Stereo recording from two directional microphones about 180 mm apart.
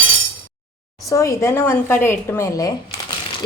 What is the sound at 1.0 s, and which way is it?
A woman's voice, 15° left (ahead or behind).